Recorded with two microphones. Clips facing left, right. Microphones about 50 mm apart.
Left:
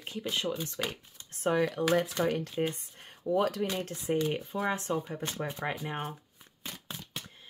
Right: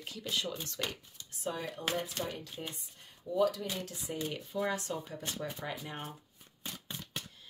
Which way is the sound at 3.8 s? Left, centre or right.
Left.